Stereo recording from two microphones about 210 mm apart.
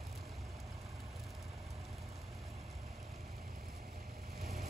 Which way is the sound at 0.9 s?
Centre (ahead or behind).